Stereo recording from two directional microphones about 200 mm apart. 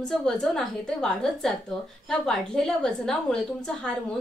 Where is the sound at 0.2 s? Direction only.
5° left (ahead or behind).